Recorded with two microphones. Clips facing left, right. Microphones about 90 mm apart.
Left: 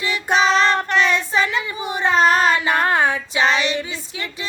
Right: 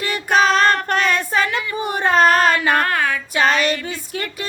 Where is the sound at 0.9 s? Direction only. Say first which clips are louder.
Even; 50° right (ahead or behind).